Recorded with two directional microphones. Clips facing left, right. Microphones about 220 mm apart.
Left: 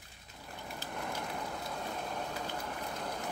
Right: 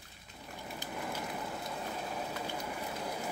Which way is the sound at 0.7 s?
5° right (ahead or behind).